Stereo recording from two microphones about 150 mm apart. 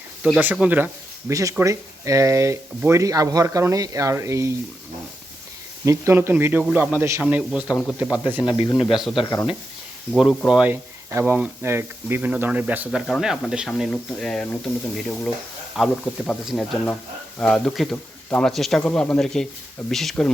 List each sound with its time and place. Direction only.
0.3 s speech: 10° right (ahead or behind)
1.3 s speech: 20° right (ahead or behind)
5.8 s speech: 20° right (ahead or behind)
8.4 s speech: 30° left (ahead or behind)
8.9 s speech: centre (ahead or behind)
9.2 s speech: 20° left (ahead or behind)
10.2 s speech: 5° right (ahead or behind)